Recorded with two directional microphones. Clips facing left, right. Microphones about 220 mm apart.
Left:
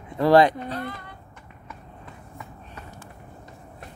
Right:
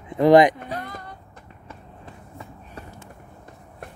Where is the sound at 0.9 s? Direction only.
45° right (ahead or behind).